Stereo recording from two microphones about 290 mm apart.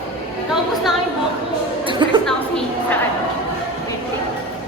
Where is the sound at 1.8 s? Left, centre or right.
Centre.